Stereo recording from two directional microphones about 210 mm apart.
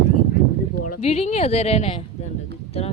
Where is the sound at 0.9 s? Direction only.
30° left (ahead or behind).